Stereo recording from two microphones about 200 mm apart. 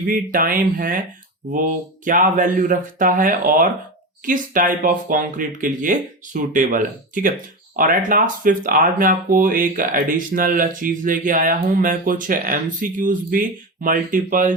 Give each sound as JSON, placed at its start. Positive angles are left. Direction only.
{"t": 0.1, "sound": "speech", "side_deg": -45}